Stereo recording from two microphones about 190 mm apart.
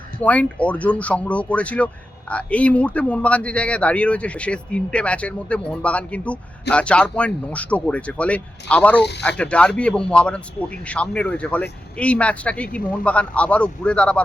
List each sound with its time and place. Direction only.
0.2 s speech: 5° left (ahead or behind)